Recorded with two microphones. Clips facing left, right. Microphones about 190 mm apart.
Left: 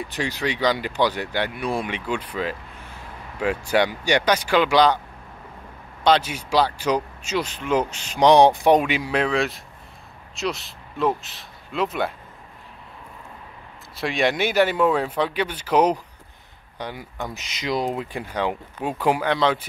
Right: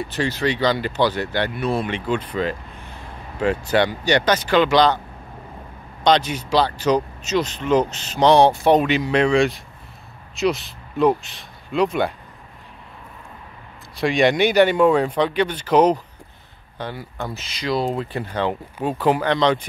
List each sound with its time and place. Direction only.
0.1 s speech: 15° left (ahead or behind)
6.0 s speech: 5° left (ahead or behind)
13.9 s speech: centre (ahead or behind)